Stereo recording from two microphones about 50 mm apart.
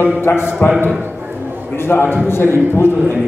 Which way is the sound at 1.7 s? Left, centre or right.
Left.